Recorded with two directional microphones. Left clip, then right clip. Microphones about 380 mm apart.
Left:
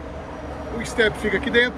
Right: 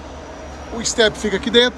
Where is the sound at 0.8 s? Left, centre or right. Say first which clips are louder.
Right 4 dB; centre.